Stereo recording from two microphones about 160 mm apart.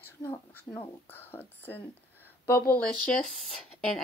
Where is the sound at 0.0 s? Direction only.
25° left (ahead or behind).